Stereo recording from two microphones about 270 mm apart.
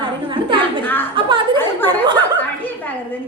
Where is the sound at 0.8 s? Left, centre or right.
Centre.